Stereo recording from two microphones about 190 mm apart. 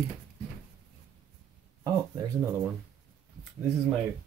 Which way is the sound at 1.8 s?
15° right (ahead or behind).